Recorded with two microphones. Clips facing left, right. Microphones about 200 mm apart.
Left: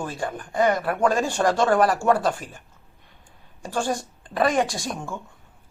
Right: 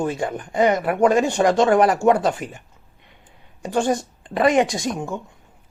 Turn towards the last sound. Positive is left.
turn(degrees=-20)  # may be behind; listen again after turning